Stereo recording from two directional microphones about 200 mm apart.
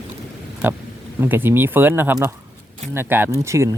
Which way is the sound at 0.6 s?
10° right (ahead or behind).